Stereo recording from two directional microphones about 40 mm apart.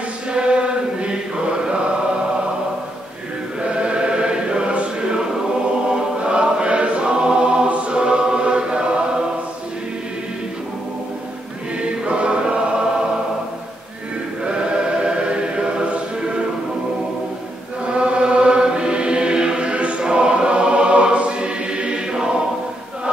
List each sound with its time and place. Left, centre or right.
0.3 s chant: right
3.6 s choir: right
12.1 s choir: right
14.4 s choir: right
17.8 s chant: right
22.1 s choir: centre